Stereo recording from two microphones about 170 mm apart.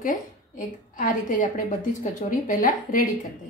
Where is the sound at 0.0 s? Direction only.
50° left (ahead or behind).